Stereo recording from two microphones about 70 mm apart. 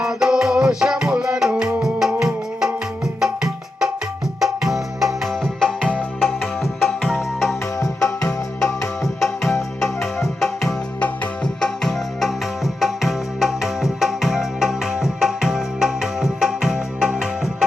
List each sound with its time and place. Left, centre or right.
0.0 s music: centre
5.4 s music: centre
6.1 s music: centre
7.8 s music: left
8.6 s music: centre